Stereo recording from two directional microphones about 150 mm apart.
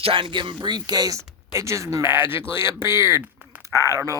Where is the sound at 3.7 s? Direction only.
20° left (ahead or behind).